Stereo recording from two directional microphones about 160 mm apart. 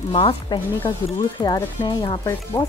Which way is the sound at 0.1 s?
30° left (ahead or behind).